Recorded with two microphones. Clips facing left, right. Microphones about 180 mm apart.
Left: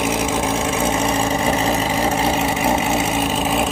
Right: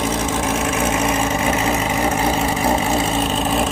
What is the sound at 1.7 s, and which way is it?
Vehicle, 30° left (ahead or behind).